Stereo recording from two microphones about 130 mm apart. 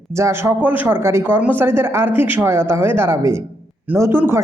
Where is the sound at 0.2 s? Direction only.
20° right (ahead or behind).